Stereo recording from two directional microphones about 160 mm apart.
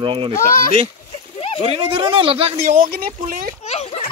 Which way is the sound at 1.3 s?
35° left (ahead or behind).